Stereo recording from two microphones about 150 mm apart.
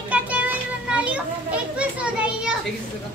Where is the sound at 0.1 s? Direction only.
10° right (ahead or behind).